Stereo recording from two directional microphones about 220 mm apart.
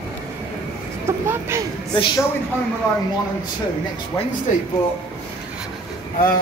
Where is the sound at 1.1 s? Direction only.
10° right (ahead or behind).